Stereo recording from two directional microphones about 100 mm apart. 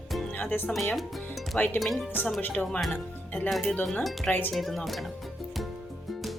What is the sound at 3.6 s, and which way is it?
Speech, 15° left (ahead or behind).